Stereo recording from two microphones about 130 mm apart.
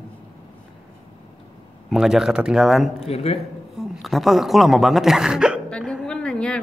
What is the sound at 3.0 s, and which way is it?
Speech, 50° left (ahead or behind).